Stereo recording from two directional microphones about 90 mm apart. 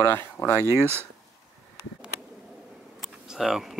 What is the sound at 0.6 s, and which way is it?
Speech, 30° right (ahead or behind).